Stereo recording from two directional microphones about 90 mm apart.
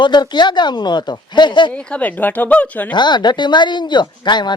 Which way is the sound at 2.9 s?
55° left (ahead or behind).